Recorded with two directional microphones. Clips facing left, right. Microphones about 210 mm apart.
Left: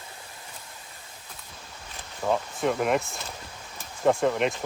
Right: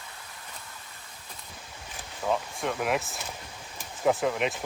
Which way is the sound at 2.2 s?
10° left (ahead or behind).